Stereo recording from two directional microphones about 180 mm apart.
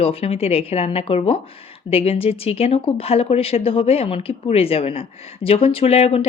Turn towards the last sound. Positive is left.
turn(degrees=35)  # may be behind; listen again after turning